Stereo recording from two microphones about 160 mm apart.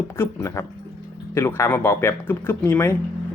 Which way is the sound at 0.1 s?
15° left (ahead or behind).